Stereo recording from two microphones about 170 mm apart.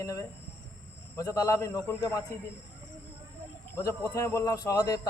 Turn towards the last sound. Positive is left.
turn(degrees=20)  # may be behind; listen again after turning